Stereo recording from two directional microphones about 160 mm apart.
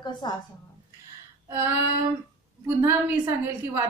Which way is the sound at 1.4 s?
15° right (ahead or behind).